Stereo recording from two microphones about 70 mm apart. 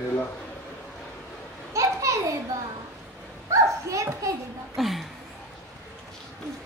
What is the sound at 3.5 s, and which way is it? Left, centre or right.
Children playing, right.